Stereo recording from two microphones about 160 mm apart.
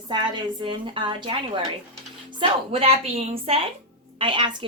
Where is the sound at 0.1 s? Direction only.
30° right (ahead or behind).